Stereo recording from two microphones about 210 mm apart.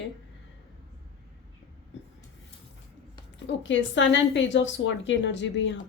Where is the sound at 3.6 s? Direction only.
60° left (ahead or behind).